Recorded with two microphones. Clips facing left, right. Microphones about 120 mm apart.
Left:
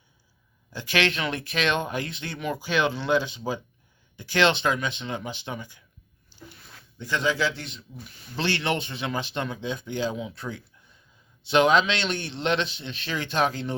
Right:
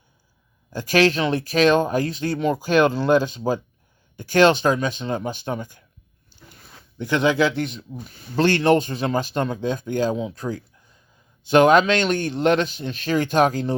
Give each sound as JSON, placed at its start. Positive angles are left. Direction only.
{"t": 0.7, "sound": "a man's voice", "side_deg": -45}
{"t": 7.0, "sound": "a man's voice", "side_deg": -55}